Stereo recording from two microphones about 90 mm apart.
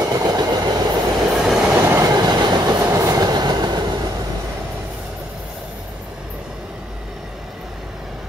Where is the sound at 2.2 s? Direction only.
50° right (ahead or behind).